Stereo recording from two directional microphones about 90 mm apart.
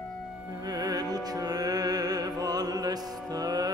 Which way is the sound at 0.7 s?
45° right (ahead or behind).